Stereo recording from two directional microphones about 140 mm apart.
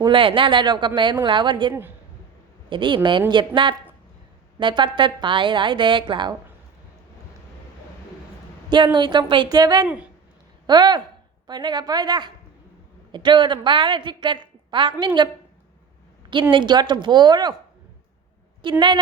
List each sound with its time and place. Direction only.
0.0 s a woman's voice: 35° right (ahead or behind)
8.7 s a woman's voice: 35° right (ahead or behind)
9.8 s speech: 10° right (ahead or behind)
10.7 s a woman's voice: 30° right (ahead or behind)
16.3 s a woman's voice: 35° right (ahead or behind)
18.6 s a woman's voice: 35° right (ahead or behind)